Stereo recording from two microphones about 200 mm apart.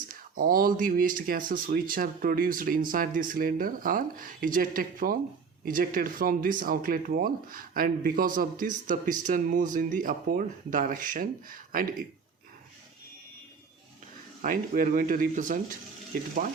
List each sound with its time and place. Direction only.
0.1 s speech: 45° right (ahead or behind)
14.4 s speech: 45° right (ahead or behind)